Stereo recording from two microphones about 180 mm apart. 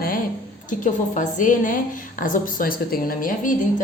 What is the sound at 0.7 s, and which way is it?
A woman's voice, 45° left (ahead or behind).